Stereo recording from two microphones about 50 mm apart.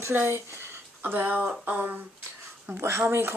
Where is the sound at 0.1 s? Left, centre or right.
Right.